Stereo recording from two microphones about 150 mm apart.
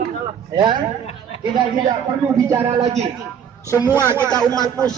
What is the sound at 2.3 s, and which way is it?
Speech, 20° right (ahead or behind).